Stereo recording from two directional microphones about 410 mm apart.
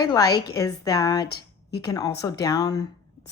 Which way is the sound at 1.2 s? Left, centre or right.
Left.